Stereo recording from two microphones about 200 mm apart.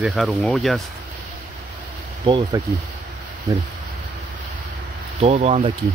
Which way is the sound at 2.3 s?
25° right (ahead or behind).